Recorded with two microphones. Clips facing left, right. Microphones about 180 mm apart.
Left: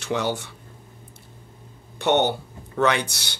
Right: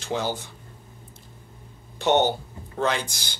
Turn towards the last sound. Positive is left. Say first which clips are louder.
# left 4 dB
turn(degrees=70)  # may be behind; listen again after turning